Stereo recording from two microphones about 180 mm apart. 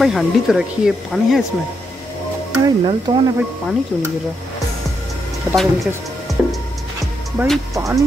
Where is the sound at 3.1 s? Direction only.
25° right (ahead or behind).